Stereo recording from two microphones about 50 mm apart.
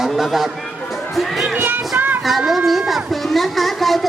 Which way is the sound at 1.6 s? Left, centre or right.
Right.